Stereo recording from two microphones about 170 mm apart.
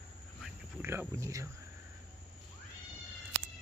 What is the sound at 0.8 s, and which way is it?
Speech, 15° right (ahead or behind).